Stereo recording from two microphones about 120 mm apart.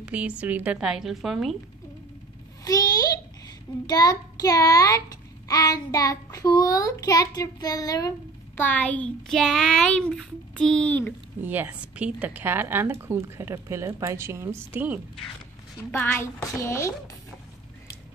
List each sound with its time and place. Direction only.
0.0 s speech: 10° right (ahead or behind)
2.6 s a woman's voice: 30° left (ahead or behind)
8.5 s a child's voice: 15° left (ahead or behind)
11.4 s speech: 15° right (ahead or behind)
15.9 s a woman's voice: 15° left (ahead or behind)